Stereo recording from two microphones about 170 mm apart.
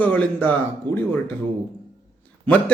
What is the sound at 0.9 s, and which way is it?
Speech, 25° right (ahead or behind).